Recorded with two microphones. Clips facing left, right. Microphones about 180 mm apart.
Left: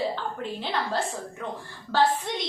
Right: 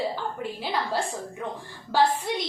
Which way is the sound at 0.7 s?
10° right (ahead or behind).